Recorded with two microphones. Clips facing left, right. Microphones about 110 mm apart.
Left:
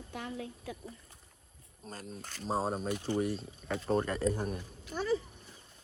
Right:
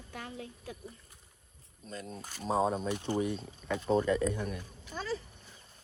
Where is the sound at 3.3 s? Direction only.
60° right (ahead or behind).